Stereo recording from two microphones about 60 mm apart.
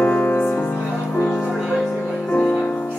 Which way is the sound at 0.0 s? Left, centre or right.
Left.